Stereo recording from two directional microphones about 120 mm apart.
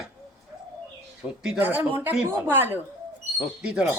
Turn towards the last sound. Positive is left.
turn(degrees=-10)  # may be behind; listen again after turning